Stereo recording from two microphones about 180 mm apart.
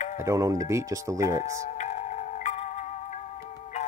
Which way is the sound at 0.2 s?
15° right (ahead or behind).